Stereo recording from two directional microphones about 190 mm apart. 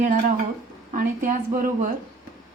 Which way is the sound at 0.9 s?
45° right (ahead or behind).